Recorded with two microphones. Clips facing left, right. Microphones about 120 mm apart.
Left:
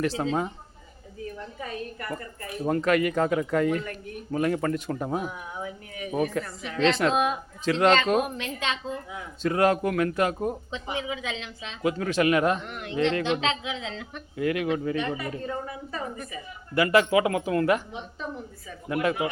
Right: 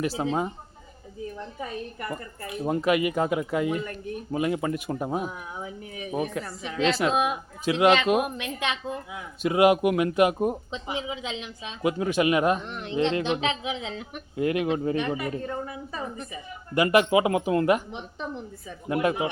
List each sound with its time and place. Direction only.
0.0 s speech: 10° right (ahead or behind)
2.0 s speech: 15° right (ahead or behind)
6.7 s a woman's voice: 5° right (ahead or behind); by 15.0 s 25° right (ahead or behind)
15.0 s speech: 10° right (ahead or behind)
16.7 s speech: 20° right (ahead or behind)